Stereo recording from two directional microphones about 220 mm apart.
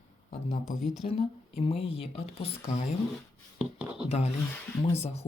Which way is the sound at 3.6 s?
5° right (ahead or behind).